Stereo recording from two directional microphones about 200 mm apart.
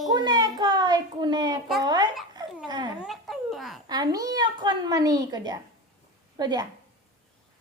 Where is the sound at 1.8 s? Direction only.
20° right (ahead or behind).